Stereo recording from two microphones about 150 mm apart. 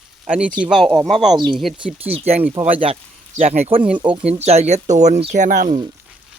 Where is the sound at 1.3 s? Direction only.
30° right (ahead or behind).